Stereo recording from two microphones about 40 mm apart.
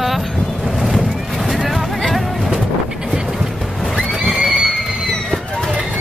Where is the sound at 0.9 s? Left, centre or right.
Centre.